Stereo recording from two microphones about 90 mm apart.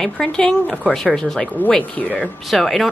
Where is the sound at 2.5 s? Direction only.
Centre (ahead or behind).